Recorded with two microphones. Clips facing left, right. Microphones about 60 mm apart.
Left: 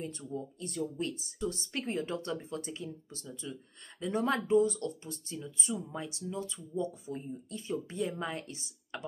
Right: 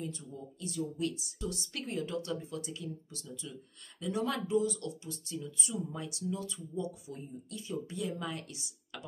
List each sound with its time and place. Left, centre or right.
0.3 s speech: left